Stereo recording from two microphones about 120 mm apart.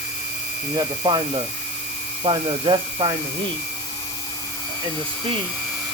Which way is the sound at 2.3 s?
45° right (ahead or behind).